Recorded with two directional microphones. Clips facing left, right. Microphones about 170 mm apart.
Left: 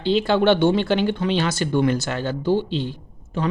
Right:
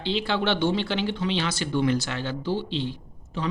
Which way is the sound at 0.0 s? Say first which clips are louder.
Left 8 dB; 45° left (ahead or behind).